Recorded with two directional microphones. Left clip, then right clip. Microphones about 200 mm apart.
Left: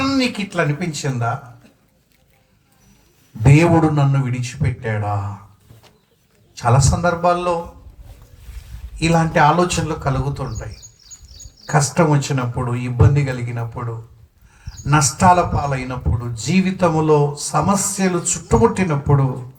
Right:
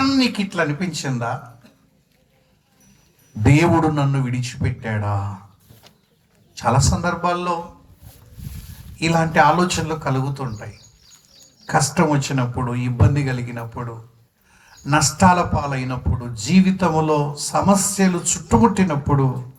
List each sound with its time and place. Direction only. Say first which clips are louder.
0.0 s a man's voice: even; 35° right (ahead or behind)
3.4 s a man's voice: left 2 dB; 35° right (ahead or behind)
6.5 s a man's voice: left 1 dB; 35° right (ahead or behind)
9.0 s a man's voice: left 1 dB; 35° right (ahead or behind)
11.6 s a man's voice: left 1 dB; 35° right (ahead or behind)